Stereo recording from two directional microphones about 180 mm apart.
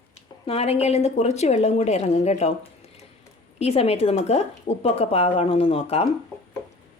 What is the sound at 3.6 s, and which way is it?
A woman's voice, 35° left (ahead or behind).